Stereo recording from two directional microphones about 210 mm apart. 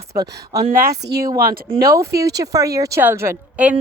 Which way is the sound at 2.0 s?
15° right (ahead or behind).